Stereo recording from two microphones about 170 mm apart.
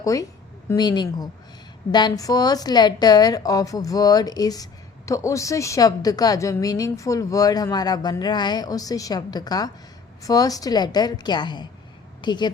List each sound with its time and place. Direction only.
0.0 s a woman's voice: 20° left (ahead or behind)